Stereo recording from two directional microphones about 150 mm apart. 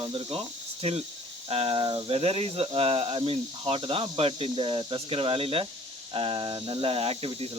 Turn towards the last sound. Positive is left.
turn(degrees=-40)  # may be behind; listen again after turning